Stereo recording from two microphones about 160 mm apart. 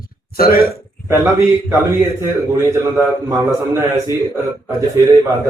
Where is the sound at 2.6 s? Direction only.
20° right (ahead or behind).